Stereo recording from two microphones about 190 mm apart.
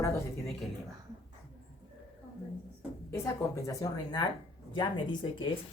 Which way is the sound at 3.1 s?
15° left (ahead or behind).